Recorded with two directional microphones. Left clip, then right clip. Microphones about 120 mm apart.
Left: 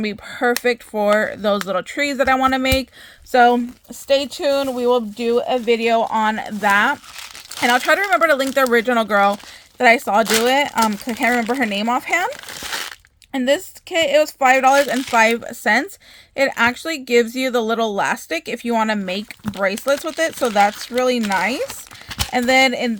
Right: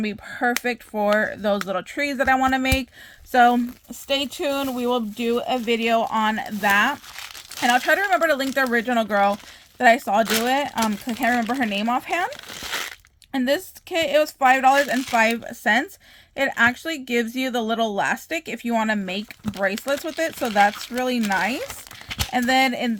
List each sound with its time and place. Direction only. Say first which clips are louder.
0.0 s speech: left 4 dB; 35° left (ahead or behind)